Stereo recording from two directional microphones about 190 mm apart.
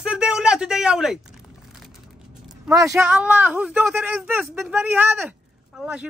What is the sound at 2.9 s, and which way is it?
Speech, 5° right (ahead or behind).